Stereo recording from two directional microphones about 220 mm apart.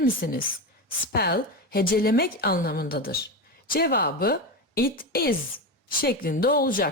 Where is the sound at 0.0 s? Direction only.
40° left (ahead or behind).